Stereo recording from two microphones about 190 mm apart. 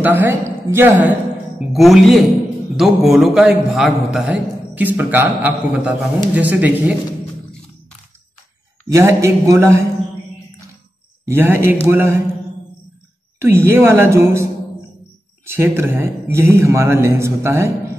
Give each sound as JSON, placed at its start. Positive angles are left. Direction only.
{"t": 0.0, "sound": "a man's voice", "side_deg": -10}
{"t": 8.8, "sound": "speech", "side_deg": -15}
{"t": 11.2, "sound": "speech", "side_deg": -10}
{"t": 13.4, "sound": "speech", "side_deg": -10}